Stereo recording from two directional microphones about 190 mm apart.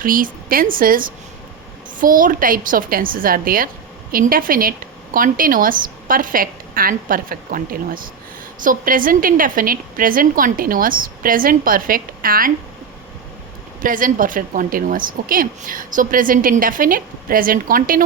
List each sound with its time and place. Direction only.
0.0 s a woman's voice: 45° right (ahead or behind)
13.8 s a woman's voice: 45° right (ahead or behind)